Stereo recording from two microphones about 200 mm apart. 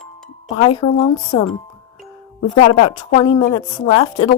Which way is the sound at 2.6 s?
30° left (ahead or behind).